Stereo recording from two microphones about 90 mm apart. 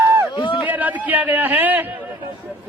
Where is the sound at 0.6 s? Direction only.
20° right (ahead or behind).